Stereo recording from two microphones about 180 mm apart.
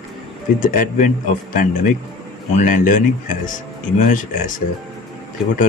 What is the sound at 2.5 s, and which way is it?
Speech, 45° left (ahead or behind).